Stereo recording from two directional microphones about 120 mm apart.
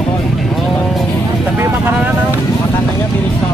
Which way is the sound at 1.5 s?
20° right (ahead or behind).